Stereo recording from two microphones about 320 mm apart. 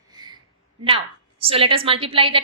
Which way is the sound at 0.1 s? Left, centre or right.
Centre.